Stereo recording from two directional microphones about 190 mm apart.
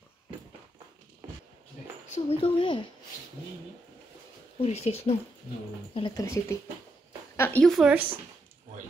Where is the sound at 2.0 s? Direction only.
35° left (ahead or behind).